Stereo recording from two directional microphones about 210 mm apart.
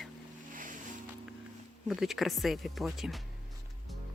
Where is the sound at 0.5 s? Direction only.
40° right (ahead or behind).